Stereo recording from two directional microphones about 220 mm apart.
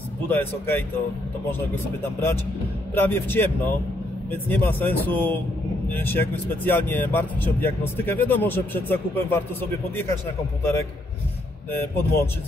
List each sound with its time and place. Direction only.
0.3 s speech: 10° left (ahead or behind)
2.9 s speech: 10° left (ahead or behind)